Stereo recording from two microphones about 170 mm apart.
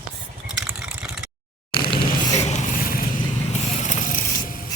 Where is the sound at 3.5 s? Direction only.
40° left (ahead or behind).